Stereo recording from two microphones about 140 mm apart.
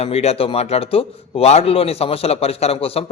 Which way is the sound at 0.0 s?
45° left (ahead or behind).